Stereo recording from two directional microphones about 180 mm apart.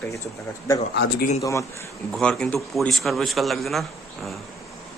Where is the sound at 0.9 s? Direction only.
65° left (ahead or behind).